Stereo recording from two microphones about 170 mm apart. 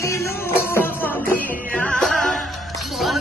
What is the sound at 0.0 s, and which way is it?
Music, 15° left (ahead or behind).